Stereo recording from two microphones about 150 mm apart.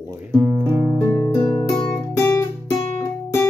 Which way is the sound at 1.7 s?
25° left (ahead or behind).